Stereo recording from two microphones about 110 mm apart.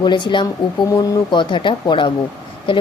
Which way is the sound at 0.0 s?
45° left (ahead or behind).